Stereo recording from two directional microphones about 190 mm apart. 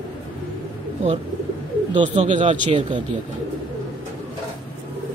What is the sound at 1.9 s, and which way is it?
Speech, 40° right (ahead or behind).